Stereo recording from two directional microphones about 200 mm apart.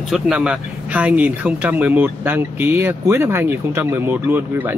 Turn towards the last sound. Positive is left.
turn(degrees=-10)  # may be behind; listen again after turning